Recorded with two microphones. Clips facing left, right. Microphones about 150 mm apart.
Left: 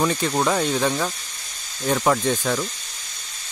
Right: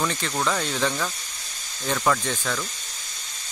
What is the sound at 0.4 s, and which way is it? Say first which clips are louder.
Speech: left 3 dB; 20° left (ahead or behind).